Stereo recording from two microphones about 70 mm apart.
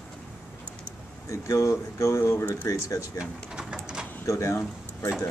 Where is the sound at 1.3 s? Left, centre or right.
Left.